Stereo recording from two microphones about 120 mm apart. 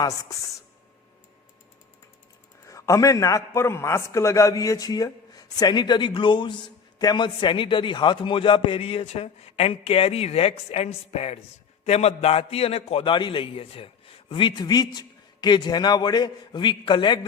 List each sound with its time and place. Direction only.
0.0 s speech: 30° left (ahead or behind)
2.6 s a man's voice: 25° left (ahead or behind)